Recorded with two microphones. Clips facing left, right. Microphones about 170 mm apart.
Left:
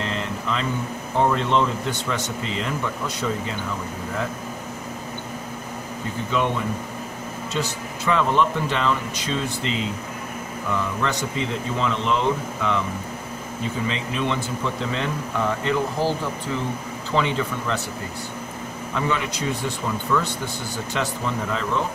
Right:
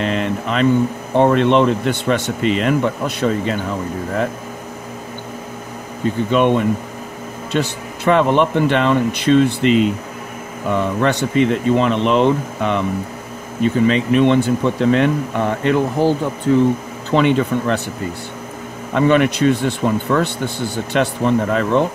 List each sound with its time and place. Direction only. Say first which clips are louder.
0.0 s a sound: right 8 dB; 70° right (ahead or behind)
1.1 s speech: right 7 dB; 70° right (ahead or behind)
6.3 s speech: right 8 dB; 65° right (ahead or behind)
18.9 s speech: right 12 dB; 70° right (ahead or behind)